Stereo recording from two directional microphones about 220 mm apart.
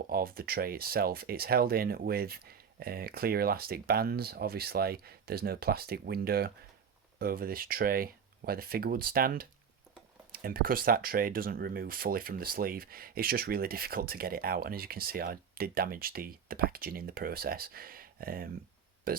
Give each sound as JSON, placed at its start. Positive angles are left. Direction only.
{"t": 0.1, "sound": "speech", "side_deg": -40}